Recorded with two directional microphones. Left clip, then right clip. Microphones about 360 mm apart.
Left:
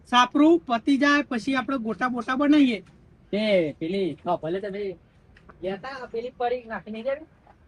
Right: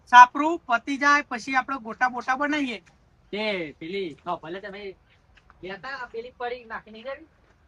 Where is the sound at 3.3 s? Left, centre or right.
Centre.